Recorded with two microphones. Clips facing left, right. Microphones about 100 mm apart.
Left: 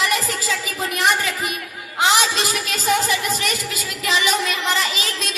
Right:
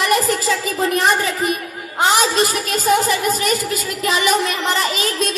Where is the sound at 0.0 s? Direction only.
45° right (ahead or behind).